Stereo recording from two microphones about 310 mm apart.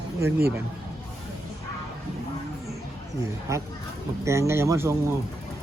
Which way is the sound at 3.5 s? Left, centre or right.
Centre.